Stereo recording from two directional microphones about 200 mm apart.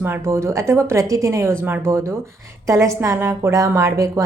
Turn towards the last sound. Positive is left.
turn(degrees=-15)  # may be behind; listen again after turning